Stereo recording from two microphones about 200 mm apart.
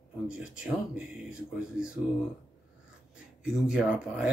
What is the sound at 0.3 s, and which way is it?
Speech, 5° right (ahead or behind).